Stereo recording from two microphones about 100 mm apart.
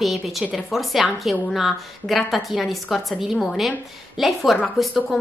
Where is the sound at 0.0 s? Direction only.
Centre (ahead or behind).